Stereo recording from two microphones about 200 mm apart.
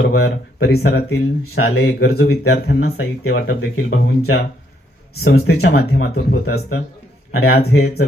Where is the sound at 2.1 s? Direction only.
50° left (ahead or behind).